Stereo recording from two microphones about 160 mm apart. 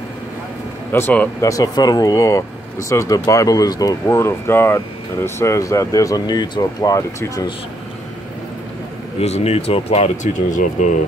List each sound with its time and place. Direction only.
0.9 s speech: 10° left (ahead or behind)
9.2 s speech: 40° left (ahead or behind)